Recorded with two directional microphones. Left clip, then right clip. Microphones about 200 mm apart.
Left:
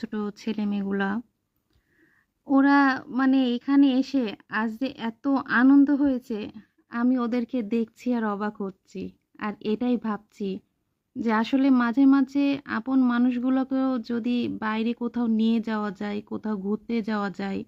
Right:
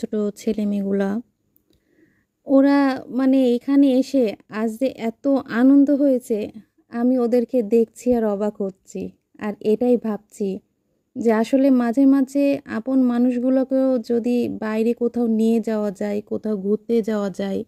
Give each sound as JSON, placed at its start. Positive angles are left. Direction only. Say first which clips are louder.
{"t": 0.0, "sound": "speech", "louder": "right 9 dB", "side_deg": -15}
{"t": 2.5, "sound": "speech", "louder": "right 3 dB", "side_deg": -15}